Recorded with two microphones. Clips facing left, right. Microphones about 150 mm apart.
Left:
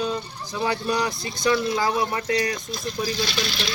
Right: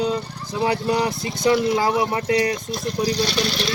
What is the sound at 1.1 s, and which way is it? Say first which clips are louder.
Speech: right 5 dB; 65° right (ahead or behind).